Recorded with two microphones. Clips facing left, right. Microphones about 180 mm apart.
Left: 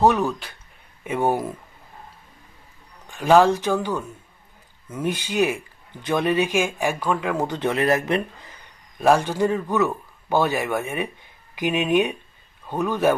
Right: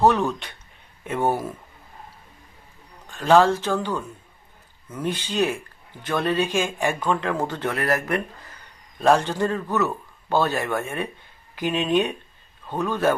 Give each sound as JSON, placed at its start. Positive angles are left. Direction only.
{"t": 0.0, "sound": "speech", "side_deg": 10}
{"t": 0.3, "sound": "speech", "side_deg": 0}
{"t": 1.0, "sound": "speech", "side_deg": 10}
{"t": 3.1, "sound": "speech", "side_deg": 10}
{"t": 6.8, "sound": "speech", "side_deg": 0}
{"t": 9.0, "sound": "speech", "side_deg": 10}